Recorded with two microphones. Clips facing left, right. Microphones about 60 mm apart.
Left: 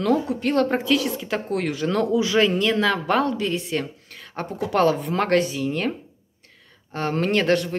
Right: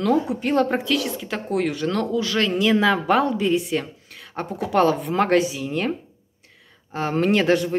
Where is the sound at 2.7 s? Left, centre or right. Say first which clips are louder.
Right 3 dB; centre.